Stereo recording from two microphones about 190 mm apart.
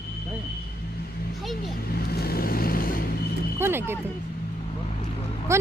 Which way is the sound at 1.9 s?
55° left (ahead or behind).